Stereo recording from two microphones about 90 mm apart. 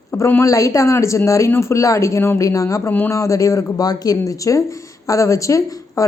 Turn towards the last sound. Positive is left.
turn(degrees=35)  # may be behind; listen again after turning